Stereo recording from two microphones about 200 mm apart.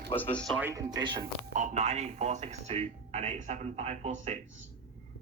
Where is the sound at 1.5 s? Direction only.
35° right (ahead or behind).